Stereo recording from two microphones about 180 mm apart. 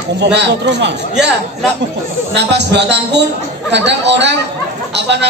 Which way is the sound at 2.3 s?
70° right (ahead or behind).